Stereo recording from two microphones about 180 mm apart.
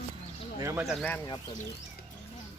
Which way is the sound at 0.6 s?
15° right (ahead or behind).